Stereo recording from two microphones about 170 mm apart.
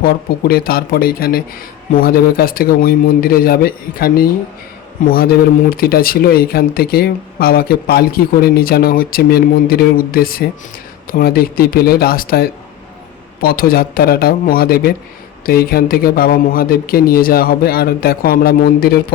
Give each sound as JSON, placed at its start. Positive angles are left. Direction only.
{"t": 0.0, "sound": "speech", "side_deg": 60}